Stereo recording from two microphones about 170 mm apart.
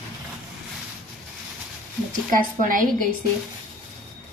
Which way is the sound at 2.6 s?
55° right (ahead or behind).